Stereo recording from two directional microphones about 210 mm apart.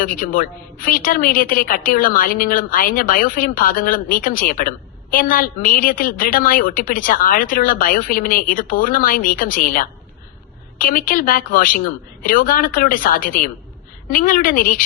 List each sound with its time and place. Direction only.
0.0 s a woman's voice: 40° left (ahead or behind)